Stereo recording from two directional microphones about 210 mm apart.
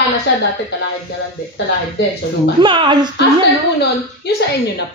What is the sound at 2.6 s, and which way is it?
Speech, 20° right (ahead or behind).